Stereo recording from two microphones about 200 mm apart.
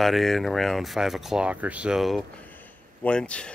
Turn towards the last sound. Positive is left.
turn(degrees=5)  # may be behind; listen again after turning